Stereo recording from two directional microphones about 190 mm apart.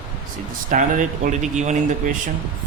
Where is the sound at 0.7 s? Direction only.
40° right (ahead or behind).